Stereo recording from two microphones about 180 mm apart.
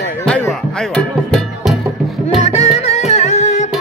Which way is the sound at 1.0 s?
5° left (ahead or behind).